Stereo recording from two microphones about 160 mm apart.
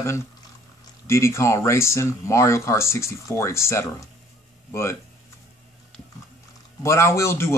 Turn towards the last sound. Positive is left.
turn(degrees=15)  # may be behind; listen again after turning